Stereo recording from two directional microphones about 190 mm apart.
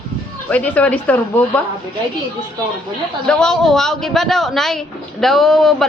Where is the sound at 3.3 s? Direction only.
5° left (ahead or behind).